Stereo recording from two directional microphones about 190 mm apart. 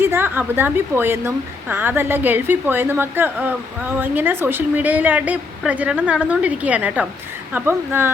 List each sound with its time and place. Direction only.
0.0 s a woman's voice: 10° right (ahead or behind)